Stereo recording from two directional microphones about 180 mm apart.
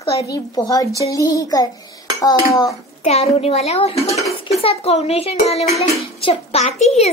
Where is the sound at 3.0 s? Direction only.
35° left (ahead or behind).